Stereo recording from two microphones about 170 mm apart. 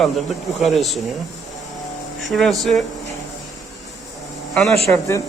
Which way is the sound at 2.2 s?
Centre (ahead or behind).